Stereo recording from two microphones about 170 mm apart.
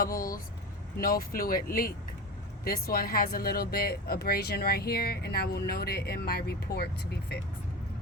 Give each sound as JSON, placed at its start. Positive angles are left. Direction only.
{"t": 0.0, "sound": "speech", "side_deg": 55}